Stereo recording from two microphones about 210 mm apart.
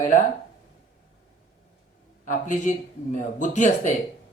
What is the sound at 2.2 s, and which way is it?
A man's voice, 35° left (ahead or behind).